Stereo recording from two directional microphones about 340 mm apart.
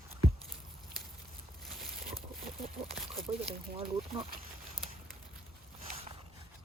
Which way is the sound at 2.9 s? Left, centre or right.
Centre.